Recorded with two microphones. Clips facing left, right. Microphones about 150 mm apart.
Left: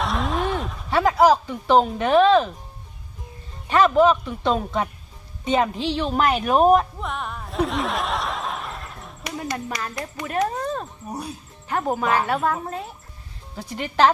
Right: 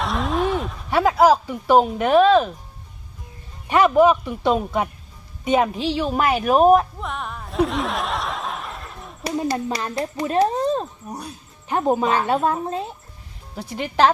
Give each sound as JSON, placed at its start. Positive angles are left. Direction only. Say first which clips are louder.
{"t": 0.0, "sound": "a sound", "louder": "right 2 dB", "side_deg": 0}
{"t": 0.9, "sound": "speech", "louder": "right 1 dB", "side_deg": -10}
{"t": 3.7, "sound": "a woman's voice", "louder": "right 1 dB", "side_deg": -15}
{"t": 9.2, "sound": "speech", "louder": "right 6 dB", "side_deg": -30}
{"t": 13.6, "sound": "speech", "louder": "right 1 dB", "side_deg": -10}